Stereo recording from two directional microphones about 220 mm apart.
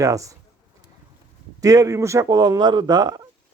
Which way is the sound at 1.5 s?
15° right (ahead or behind).